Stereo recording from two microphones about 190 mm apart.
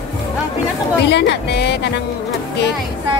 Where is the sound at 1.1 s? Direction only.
65° left (ahead or behind).